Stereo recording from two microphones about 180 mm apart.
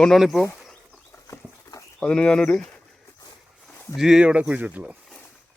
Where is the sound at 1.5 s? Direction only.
15° left (ahead or behind).